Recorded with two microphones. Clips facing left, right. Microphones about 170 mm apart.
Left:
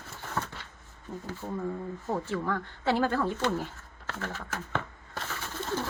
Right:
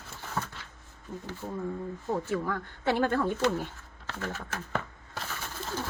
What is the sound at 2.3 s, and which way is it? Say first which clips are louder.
Speech: even; 20° right (ahead or behind).